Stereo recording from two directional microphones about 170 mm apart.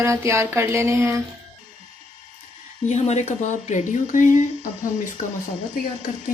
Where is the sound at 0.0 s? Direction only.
15° right (ahead or behind).